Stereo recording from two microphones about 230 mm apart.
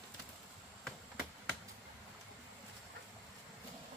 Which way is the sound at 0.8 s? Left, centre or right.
Centre.